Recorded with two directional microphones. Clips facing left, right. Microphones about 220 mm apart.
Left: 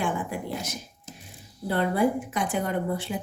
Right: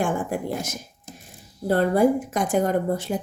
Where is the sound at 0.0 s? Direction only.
45° right (ahead or behind).